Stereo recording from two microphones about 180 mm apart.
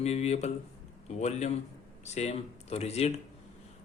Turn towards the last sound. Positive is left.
turn(degrees=35)  # may be behind; listen again after turning